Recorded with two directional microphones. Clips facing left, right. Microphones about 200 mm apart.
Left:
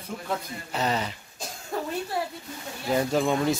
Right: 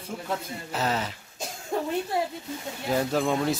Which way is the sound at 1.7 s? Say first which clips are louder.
Right 3 dB; 20° right (ahead or behind).